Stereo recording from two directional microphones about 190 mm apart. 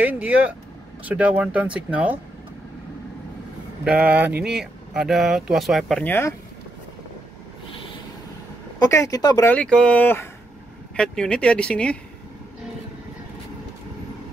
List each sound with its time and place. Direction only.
0.1 s speech: 10° right (ahead or behind)
3.8 s speech: 5° right (ahead or behind); by 6.3 s 10° left (ahead or behind)
8.7 s speech: 20° left (ahead or behind)
9.5 s speech: 5° left (ahead or behind)